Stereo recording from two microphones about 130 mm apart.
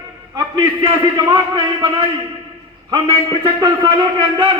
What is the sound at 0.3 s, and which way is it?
A man's voice, 25° right (ahead or behind).